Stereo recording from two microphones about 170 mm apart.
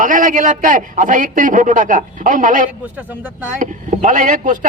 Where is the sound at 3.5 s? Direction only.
50° right (ahead or behind).